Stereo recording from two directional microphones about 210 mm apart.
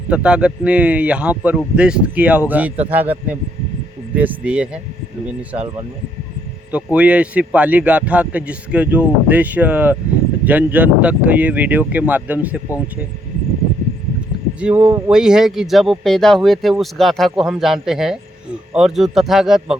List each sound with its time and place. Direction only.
0.1 s speech: 5° right (ahead or behind)
6.7 s speech: 5° right (ahead or behind)
14.6 s speech: 5° right (ahead or behind)